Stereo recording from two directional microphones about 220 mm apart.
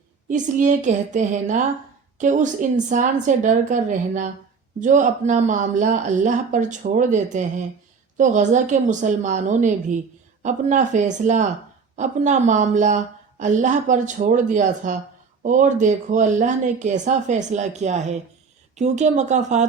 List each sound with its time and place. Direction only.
0.3 s speech: 35° right (ahead or behind)